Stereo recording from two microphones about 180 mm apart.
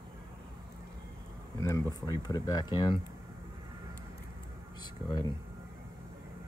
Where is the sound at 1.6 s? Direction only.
20° left (ahead or behind).